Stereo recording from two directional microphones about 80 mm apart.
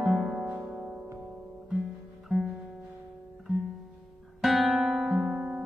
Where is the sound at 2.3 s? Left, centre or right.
Centre.